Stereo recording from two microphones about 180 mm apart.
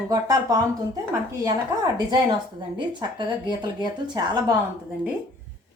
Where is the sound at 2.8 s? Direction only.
25° right (ahead or behind).